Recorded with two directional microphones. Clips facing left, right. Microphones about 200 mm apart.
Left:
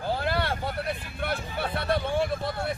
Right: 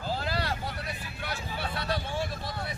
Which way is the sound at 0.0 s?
55° left (ahead or behind).